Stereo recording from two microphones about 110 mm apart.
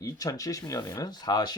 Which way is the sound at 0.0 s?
30° left (ahead or behind).